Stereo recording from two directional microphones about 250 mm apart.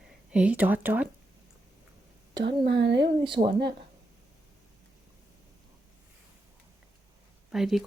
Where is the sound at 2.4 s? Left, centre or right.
Right.